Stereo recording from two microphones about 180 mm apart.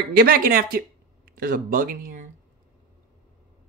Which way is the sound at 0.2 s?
55° right (ahead or behind).